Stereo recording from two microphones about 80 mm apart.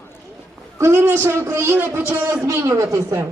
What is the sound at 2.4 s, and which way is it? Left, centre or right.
Speech, right.